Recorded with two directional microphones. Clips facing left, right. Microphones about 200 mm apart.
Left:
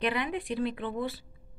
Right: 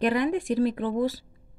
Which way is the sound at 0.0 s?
45° right (ahead or behind).